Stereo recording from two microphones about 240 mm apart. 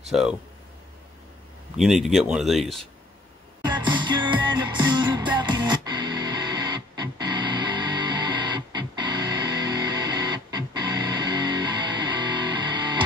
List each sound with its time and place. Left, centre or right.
0.1 s speech: centre
1.8 s speech: centre
3.6 s music: centre